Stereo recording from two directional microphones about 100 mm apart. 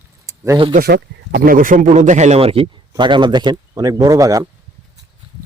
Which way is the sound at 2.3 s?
70° right (ahead or behind).